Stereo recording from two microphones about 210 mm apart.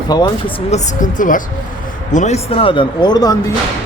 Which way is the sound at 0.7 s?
40° left (ahead or behind).